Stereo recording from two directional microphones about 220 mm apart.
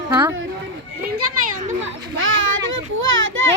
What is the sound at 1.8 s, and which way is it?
A child's voice, 65° right (ahead or behind).